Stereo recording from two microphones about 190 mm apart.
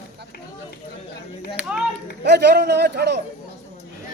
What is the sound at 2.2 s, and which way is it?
Speech, 60° right (ahead or behind).